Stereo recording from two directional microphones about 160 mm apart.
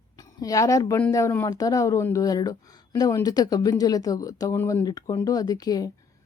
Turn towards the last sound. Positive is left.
turn(degrees=25)  # may be behind; listen again after turning